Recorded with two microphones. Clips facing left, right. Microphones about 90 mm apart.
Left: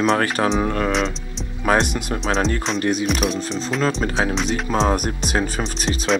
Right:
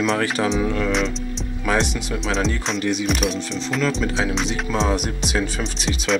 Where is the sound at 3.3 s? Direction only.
40° left (ahead or behind).